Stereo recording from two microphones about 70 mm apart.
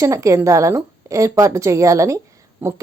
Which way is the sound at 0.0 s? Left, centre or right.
Right.